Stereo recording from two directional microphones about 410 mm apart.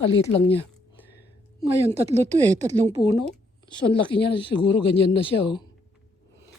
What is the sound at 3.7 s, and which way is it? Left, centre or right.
Speech, centre.